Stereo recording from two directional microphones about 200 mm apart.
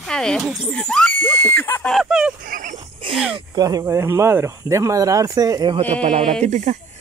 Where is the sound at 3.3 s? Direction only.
20° right (ahead or behind).